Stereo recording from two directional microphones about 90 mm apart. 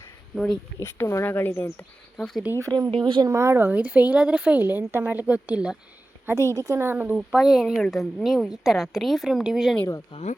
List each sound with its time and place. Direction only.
0.3 s a woman's voice: 5° left (ahead or behind)
0.8 s speech: 25° left (ahead or behind)
2.1 s speech: centre (ahead or behind)
2.6 s speech: 40° right (ahead or behind)
2.9 s speech: 65° right (ahead or behind)
3.3 s a woman's voice: 30° right (ahead or behind)
3.6 s a woman's voice: 20° right (ahead or behind)
6.2 s a woman's voice: 35° right (ahead or behind)
6.8 s speech: 20° right (ahead or behind)
7.2 s a woman's voice: 5° right (ahead or behind)
10.1 s speech: 90° left